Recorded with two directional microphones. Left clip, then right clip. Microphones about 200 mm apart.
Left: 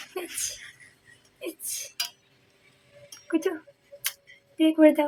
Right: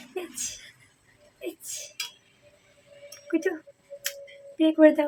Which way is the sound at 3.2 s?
15° left (ahead or behind).